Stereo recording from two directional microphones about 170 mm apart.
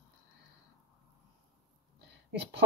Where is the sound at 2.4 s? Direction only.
80° right.